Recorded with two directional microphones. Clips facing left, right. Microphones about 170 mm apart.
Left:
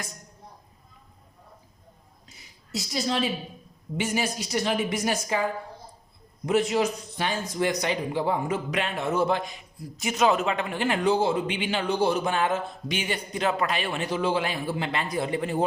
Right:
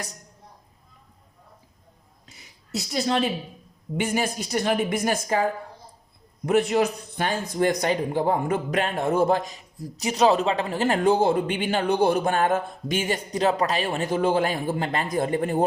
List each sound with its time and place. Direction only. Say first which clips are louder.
2.7 s a woman's voice: right 3 dB; 60° right (ahead or behind)